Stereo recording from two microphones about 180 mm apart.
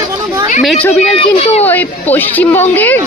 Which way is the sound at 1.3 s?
35° left (ahead or behind).